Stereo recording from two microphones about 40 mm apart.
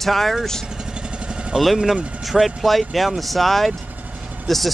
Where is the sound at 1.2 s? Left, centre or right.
Right.